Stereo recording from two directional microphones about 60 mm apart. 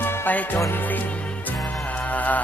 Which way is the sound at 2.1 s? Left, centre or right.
Left.